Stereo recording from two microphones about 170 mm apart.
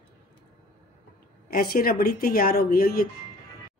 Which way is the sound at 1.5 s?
60° left (ahead or behind).